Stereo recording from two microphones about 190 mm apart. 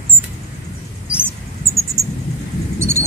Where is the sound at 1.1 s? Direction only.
5° right (ahead or behind).